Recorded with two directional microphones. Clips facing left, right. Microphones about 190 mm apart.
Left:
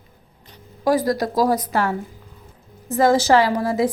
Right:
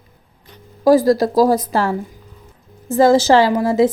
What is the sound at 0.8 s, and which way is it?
A woman's voice, 25° right (ahead or behind).